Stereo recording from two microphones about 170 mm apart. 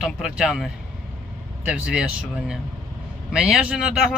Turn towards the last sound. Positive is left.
turn(degrees=-5)  # may be behind; listen again after turning